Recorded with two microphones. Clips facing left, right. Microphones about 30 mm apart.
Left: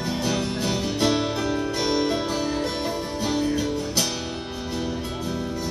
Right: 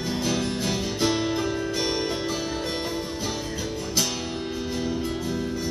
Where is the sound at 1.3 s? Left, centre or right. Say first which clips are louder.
Left 1 dB; left.